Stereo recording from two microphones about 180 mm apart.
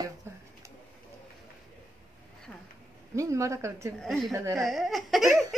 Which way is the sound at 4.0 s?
Centre (ahead or behind).